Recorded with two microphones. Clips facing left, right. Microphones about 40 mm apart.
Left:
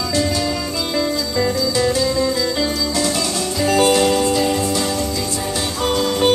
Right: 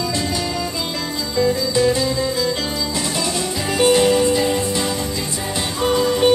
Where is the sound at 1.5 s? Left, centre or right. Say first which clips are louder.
Even; centre.